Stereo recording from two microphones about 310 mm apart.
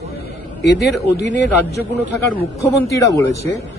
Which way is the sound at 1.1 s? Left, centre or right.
Left.